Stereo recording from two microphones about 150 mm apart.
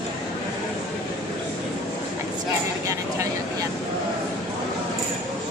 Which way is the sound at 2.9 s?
20° right (ahead or behind).